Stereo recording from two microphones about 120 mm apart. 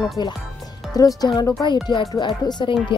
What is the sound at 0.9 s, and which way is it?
Speech, 30° left (ahead or behind).